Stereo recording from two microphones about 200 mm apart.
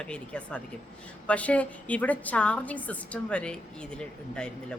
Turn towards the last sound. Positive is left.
turn(degrees=5)  # may be behind; listen again after turning